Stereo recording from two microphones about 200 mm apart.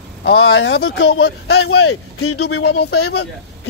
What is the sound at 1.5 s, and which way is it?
Speech, 55° left (ahead or behind).